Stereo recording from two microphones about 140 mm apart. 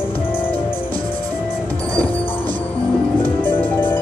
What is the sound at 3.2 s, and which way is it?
Music, 15° left (ahead or behind).